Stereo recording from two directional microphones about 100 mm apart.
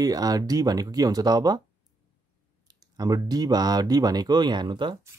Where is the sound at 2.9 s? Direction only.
40° right (ahead or behind).